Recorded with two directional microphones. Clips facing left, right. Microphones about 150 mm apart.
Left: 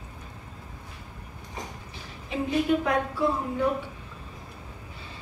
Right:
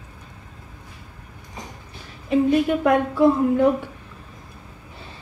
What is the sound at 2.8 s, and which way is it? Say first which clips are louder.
Speech: right 9 dB; 60° right (ahead or behind).